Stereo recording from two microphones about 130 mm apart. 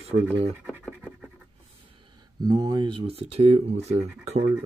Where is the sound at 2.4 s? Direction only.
30° right (ahead or behind); by 4.0 s 55° right (ahead or behind).